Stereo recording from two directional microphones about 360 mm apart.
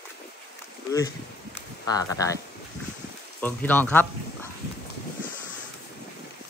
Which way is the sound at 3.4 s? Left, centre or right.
Centre.